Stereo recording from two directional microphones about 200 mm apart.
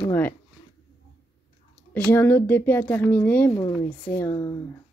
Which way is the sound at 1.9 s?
10° left (ahead or behind).